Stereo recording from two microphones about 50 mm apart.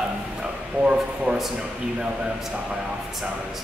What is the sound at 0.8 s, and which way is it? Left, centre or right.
Speech, right.